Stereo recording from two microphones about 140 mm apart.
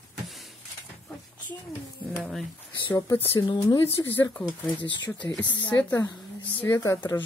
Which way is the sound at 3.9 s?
15° left (ahead or behind).